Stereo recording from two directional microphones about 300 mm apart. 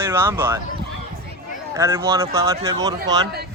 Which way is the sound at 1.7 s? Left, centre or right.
Centre.